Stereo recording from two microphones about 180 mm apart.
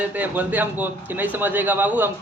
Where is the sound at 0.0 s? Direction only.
10° right (ahead or behind).